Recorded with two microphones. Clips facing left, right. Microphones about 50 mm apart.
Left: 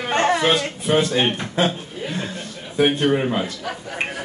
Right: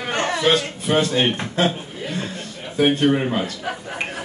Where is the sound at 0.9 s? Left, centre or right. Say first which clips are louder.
Even; centre.